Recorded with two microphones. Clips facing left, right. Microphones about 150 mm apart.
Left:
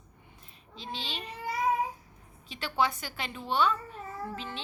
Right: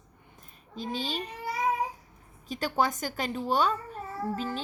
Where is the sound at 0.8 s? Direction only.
45° right (ahead or behind).